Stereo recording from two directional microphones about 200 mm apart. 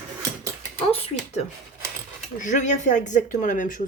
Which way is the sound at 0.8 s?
30° left (ahead or behind).